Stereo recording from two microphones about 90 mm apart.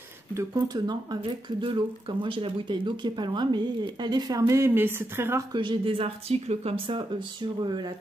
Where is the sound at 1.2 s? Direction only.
70° right (ahead or behind); by 5.4 s 25° right (ahead or behind).